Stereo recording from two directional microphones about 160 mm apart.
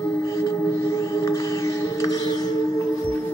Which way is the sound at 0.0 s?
20° left (ahead or behind).